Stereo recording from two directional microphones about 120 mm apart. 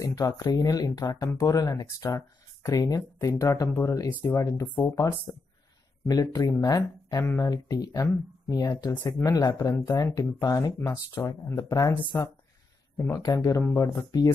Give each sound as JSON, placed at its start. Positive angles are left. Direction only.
{"t": 0.0, "sound": "speech", "side_deg": 35}
{"t": 13.2, "sound": "speech", "side_deg": 30}